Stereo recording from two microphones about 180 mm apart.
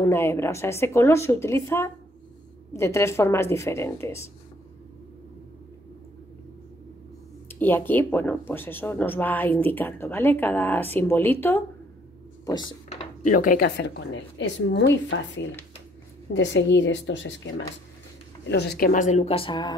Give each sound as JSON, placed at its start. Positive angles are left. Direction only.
{"t": 0.0, "sound": "speech", "side_deg": 15}
{"t": 7.4, "sound": "speech", "side_deg": 10}
{"t": 12.4, "sound": "speech", "side_deg": 20}
{"t": 12.9, "sound": "a woman's voice", "side_deg": 40}
{"t": 18.5, "sound": "speech", "side_deg": 65}